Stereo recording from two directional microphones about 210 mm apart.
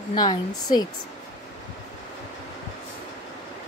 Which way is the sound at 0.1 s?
20° left (ahead or behind).